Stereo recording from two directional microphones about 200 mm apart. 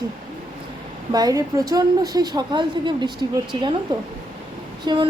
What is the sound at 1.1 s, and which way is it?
A woman's voice, 20° right (ahead or behind).